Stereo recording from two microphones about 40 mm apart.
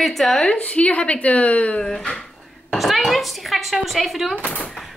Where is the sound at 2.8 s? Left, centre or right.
Centre.